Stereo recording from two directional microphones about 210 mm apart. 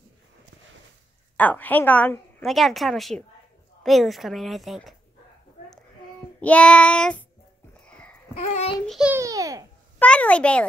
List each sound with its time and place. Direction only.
1.3 s a woman's voice: 10° left (ahead or behind)
6.4 s a woman's voice: 5° left (ahead or behind)
7.9 s a sound: 5° left (ahead or behind)
8.4 s a child's voice: 30° left (ahead or behind)
8.8 s a woman's voice: 5° right (ahead or behind)
9.2 s a child's voice: 15° right (ahead or behind)
9.9 s a child's voice: 5° left (ahead or behind)